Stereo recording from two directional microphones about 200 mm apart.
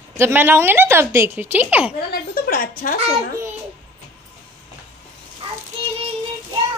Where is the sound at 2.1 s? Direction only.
45° left (ahead or behind).